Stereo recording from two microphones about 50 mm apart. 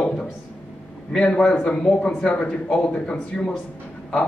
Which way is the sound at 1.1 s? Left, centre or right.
Left.